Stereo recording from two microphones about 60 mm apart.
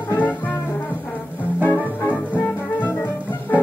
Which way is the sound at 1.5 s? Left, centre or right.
Right.